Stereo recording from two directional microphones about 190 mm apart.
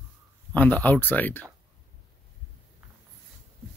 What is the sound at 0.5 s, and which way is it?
Speech, 10° left (ahead or behind).